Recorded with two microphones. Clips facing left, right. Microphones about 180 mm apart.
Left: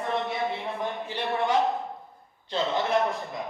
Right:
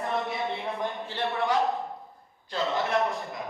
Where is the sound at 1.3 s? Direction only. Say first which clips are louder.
Left 3 dB; 20° left (ahead or behind).